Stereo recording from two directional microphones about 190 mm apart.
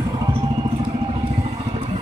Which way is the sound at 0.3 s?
25° right (ahead or behind).